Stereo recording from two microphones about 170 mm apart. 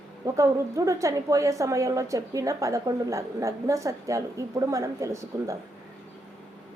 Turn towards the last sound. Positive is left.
turn(degrees=-15)  # may be behind; listen again after turning